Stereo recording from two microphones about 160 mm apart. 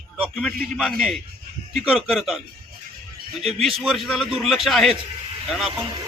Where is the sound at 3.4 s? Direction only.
Centre (ahead or behind).